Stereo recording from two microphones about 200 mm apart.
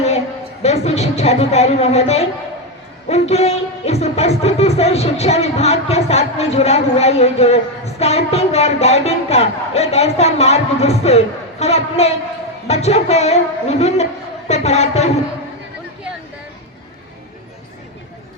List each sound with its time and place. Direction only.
0.6 s music: 35° left (ahead or behind)